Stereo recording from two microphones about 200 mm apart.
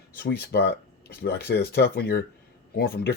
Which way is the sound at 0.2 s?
55° left (ahead or behind).